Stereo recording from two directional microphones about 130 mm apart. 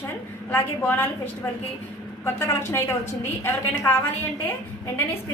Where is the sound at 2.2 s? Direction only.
20° left (ahead or behind).